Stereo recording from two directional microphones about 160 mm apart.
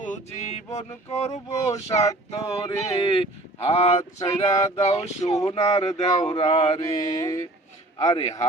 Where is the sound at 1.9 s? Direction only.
20° left (ahead or behind).